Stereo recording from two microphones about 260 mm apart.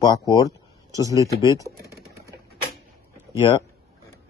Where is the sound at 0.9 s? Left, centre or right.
Centre.